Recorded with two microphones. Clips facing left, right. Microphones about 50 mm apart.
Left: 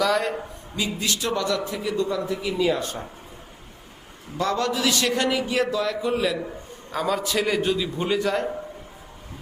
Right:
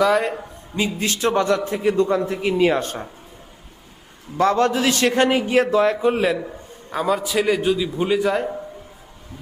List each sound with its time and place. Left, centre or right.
0.0 s a man's voice: right
0.8 s a man's voice: right
4.4 s a man's voice: right
6.9 s a man's voice: centre